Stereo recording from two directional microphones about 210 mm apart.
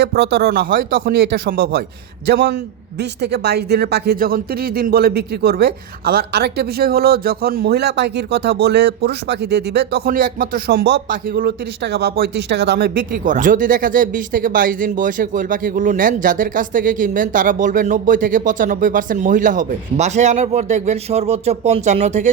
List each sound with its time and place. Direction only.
0.0 s speech: 50° right (ahead or behind); by 22.3 s 35° right (ahead or behind)